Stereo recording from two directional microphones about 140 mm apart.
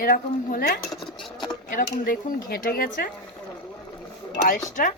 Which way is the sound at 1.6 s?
90° left.